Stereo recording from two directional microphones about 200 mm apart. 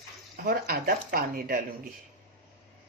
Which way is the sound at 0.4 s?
50° right (ahead or behind).